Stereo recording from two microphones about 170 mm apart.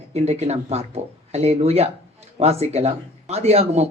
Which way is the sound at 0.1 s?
40° right (ahead or behind).